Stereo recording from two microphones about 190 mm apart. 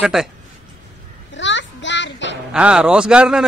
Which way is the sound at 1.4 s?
70° left (ahead or behind).